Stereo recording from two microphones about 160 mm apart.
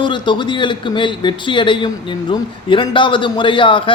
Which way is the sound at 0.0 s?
30° left (ahead or behind).